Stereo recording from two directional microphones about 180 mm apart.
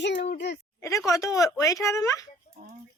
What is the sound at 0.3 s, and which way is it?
Speech, 70° left (ahead or behind).